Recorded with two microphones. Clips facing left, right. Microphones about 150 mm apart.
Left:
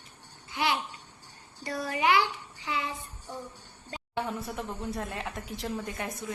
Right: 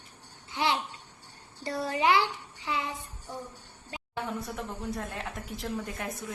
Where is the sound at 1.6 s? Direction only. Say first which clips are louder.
Right 1 dB; 30° right (ahead or behind).